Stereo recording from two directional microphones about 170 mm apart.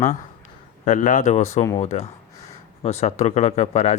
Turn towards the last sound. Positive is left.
turn(degrees=40)  # may be behind; listen again after turning